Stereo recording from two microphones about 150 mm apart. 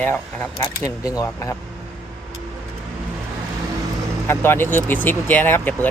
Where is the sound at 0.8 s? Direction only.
25° left (ahead or behind).